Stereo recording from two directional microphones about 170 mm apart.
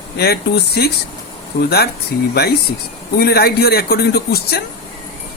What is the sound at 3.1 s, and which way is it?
A man's voice, 65° left (ahead or behind).